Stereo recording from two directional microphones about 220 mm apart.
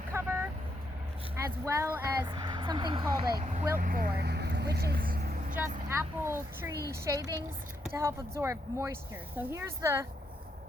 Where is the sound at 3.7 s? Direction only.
40° right (ahead or behind).